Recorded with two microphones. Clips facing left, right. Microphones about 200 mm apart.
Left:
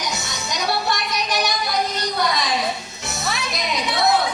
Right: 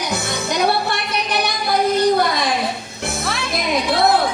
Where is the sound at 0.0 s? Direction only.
55° right (ahead or behind).